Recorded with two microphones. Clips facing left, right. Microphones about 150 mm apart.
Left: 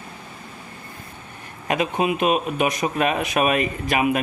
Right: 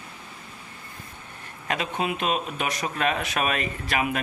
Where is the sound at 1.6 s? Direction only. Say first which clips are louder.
Left 6 dB; 15° left (ahead or behind).